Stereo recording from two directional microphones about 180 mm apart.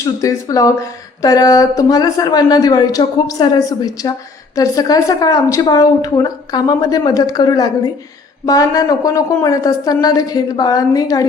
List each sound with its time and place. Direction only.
0.2 s speech: 20° left (ahead or behind)